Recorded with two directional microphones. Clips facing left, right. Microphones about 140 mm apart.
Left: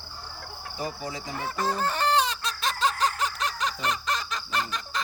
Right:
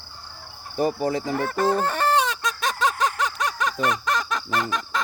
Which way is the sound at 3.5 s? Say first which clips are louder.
Right 5 dB; 55° right (ahead or behind).